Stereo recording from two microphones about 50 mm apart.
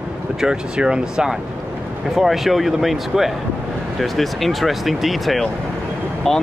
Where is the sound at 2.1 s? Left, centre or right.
Centre.